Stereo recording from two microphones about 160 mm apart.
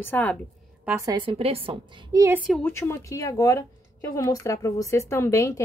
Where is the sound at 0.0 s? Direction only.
10° left (ahead or behind).